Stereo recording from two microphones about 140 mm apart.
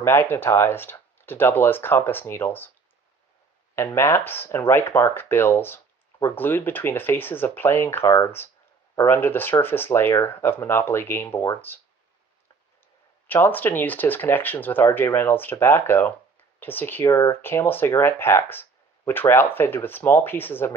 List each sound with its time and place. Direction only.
0.0 s speech: 15° left (ahead or behind)
3.7 s speech: 15° left (ahead or behind)
13.3 s speech: 15° left (ahead or behind)